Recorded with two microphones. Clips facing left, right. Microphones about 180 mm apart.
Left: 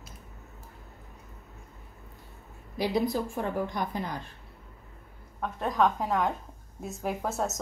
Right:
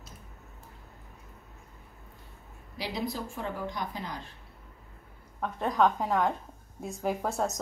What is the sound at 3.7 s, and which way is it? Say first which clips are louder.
Speech: left 4 dB; 50° left (ahead or behind).